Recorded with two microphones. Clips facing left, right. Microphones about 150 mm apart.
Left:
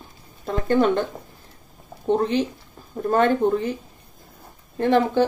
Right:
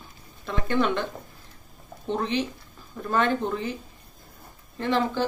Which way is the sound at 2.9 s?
45° left (ahead or behind).